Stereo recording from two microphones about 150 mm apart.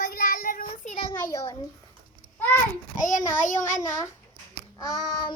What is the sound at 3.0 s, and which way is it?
A child's voice, 60° left (ahead or behind).